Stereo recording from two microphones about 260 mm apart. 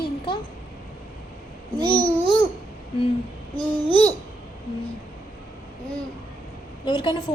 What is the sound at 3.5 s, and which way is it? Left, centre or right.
Speech, left.